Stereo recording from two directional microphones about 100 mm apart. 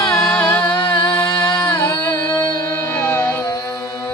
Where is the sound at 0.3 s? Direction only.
15° left (ahead or behind).